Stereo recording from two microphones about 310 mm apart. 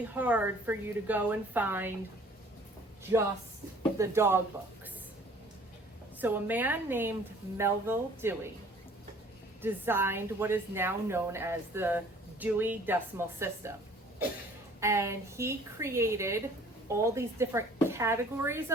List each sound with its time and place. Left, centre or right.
0.1 s a woman's voice: centre
3.0 s a woman's voice: centre
6.1 s a woman's voice: centre
9.6 s a woman's voice: centre
14.8 s a woman's voice: centre